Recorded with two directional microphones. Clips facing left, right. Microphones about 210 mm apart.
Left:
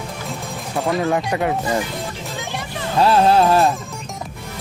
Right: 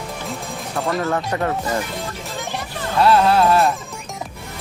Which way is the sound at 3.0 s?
30° left (ahead or behind).